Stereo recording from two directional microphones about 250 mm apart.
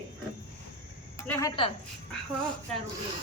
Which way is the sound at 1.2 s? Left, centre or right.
Centre.